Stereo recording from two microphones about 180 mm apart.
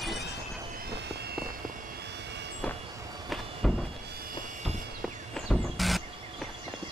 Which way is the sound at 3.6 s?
Centre (ahead or behind).